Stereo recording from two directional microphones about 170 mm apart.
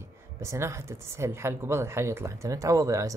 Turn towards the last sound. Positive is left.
turn(degrees=-20)  # may be behind; listen again after turning